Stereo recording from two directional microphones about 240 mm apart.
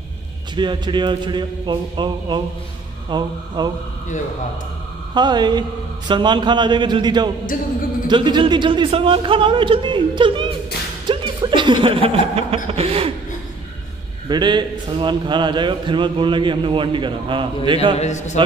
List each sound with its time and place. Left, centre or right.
0.6 s a man's voice: centre
5.1 s a man's voice: centre
14.3 s a man's voice: centre
17.9 s a man's voice: left